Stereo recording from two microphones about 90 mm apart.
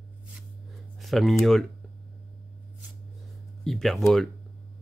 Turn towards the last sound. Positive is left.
turn(degrees=5)  # may be behind; listen again after turning